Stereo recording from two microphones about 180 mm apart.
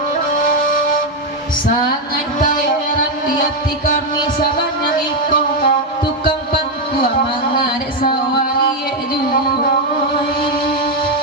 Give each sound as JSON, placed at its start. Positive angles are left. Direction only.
{"t": 2.4, "sound": "music", "side_deg": 50}
{"t": 4.9, "sound": "music", "side_deg": 50}